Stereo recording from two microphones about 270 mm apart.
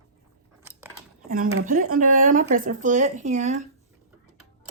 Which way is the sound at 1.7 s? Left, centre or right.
Right.